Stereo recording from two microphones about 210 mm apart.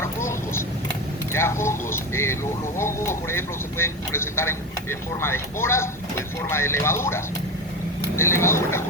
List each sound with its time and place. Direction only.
0.0 s vehicle: 10° left (ahead or behind)
1.3 s speech: 10° left (ahead or behind)